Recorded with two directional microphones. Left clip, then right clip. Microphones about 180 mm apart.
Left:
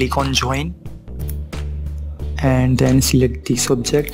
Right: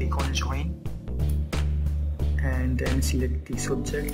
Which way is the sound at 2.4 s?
45° left (ahead or behind).